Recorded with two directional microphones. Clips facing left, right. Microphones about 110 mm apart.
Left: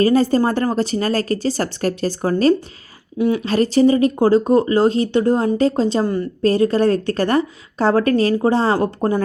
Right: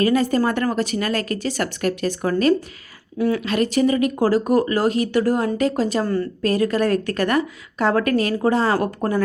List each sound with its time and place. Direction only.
0.0 s a woman's voice: 30° left (ahead or behind)
3.2 s speech: 20° left (ahead or behind)
3.4 s a woman's voice: 35° left (ahead or behind)